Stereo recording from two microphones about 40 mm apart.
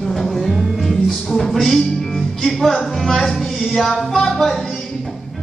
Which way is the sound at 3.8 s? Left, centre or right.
Centre.